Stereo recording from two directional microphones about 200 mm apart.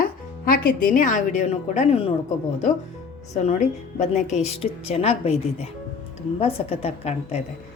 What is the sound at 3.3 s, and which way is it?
A woman's voice, 35° left (ahead or behind).